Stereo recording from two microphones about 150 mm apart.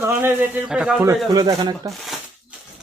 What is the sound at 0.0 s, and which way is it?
A man's voice, 15° right (ahead or behind).